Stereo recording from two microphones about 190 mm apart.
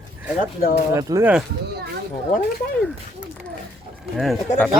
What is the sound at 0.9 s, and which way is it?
Speech, 15° right (ahead or behind).